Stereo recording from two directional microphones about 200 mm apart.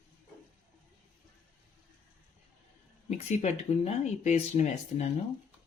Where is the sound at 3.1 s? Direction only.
35° left (ahead or behind).